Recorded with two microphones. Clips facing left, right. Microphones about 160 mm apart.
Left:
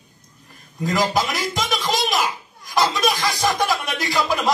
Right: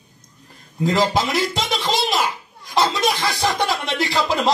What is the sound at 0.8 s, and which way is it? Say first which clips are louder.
Speech: right 2 dB; 25° right (ahead or behind).